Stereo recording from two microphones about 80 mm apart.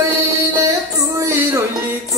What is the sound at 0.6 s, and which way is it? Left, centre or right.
Music, right.